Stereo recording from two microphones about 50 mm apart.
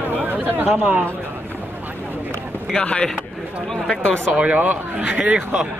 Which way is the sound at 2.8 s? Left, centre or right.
Centre.